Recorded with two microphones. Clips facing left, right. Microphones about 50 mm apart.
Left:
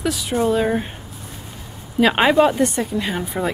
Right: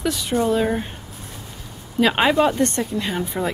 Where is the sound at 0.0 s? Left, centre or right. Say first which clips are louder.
Left 1 dB; centre.